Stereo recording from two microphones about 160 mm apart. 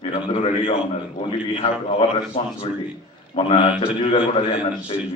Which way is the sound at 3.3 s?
30° left (ahead or behind).